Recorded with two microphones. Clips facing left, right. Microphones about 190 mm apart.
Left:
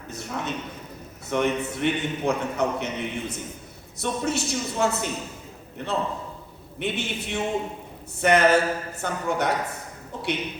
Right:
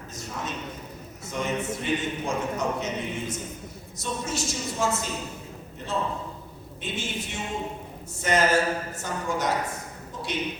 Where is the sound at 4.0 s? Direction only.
60° left (ahead or behind).